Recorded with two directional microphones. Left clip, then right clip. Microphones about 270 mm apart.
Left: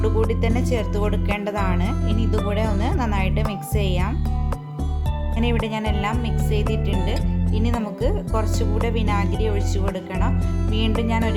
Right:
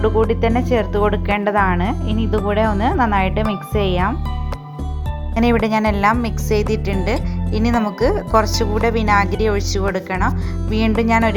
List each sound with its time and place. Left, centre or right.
0.0 s speech: centre
5.4 s speech: centre